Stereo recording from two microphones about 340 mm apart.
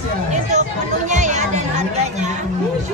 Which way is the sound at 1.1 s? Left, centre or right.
Right.